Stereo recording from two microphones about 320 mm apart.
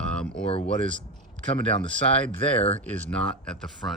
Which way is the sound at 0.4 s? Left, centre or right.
Centre.